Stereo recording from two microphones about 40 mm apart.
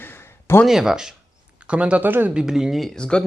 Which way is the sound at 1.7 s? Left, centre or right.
Right.